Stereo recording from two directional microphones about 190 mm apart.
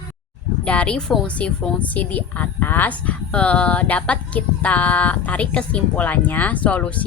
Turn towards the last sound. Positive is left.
turn(degrees=5)  # may be behind; listen again after turning